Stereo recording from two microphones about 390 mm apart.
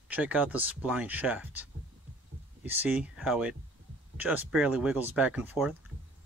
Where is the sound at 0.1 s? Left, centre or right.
Centre.